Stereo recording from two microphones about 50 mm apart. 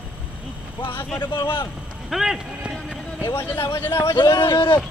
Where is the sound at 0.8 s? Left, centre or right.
Left.